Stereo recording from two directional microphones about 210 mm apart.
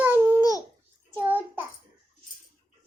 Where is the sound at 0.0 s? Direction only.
10° right (ahead or behind).